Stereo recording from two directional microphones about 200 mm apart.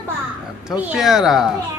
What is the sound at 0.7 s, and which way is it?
Speech, 5° right (ahead or behind).